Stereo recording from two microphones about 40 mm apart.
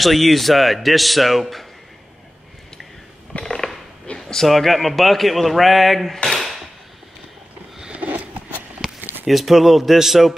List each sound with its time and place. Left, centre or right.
0.0 s speech: centre
3.3 s a sound: centre
4.5 s speech: centre
7.9 s sniff: right
8.8 s a sound: centre
9.2 s speech: centre